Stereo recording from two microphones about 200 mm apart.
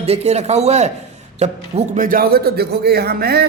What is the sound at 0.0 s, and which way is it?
A man's voice, 30° right (ahead or behind).